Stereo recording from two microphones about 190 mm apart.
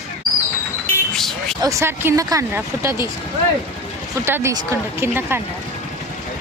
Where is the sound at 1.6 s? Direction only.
15° right (ahead or behind).